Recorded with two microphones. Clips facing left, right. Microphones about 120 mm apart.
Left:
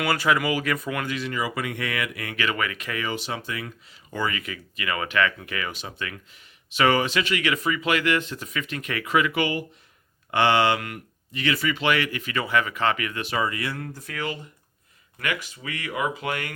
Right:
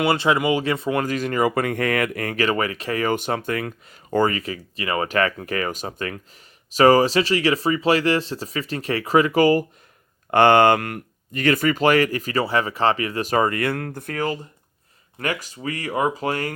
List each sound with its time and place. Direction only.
0.0 s speech: 25° right (ahead or behind)